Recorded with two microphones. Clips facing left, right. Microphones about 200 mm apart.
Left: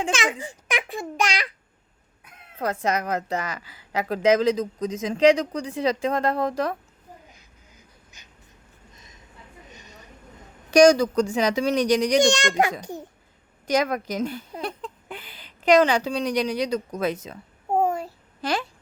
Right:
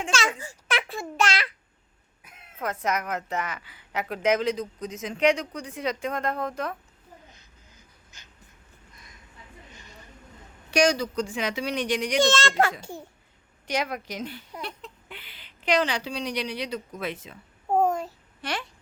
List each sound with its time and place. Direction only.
0.1 s a child's voice: 15° left (ahead or behind)
2.6 s a woman's voice: 35° left (ahead or behind)
4.8 s speech: 90° left
5.5 s a woman's voice: 30° left (ahead or behind)
9.7 s a sound: 20° left (ahead or behind)
10.7 s a woman's voice: 45° left (ahead or behind)
12.2 s a child's voice: 15° left (ahead or behind)
13.7 s a woman's voice: 45° left (ahead or behind)
17.7 s a sound: 10° left (ahead or behind)